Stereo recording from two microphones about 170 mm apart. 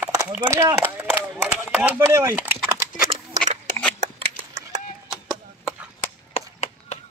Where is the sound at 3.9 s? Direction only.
40° right (ahead or behind).